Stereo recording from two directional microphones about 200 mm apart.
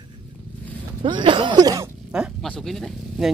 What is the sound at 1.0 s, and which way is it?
Speech, 25° right (ahead or behind).